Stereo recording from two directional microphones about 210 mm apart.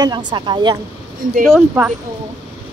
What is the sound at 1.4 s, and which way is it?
Speech, 5° right (ahead or behind).